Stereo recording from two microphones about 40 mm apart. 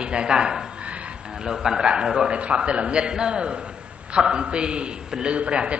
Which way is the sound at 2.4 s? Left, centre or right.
Right.